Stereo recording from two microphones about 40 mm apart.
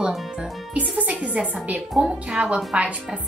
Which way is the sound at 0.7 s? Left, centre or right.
Right.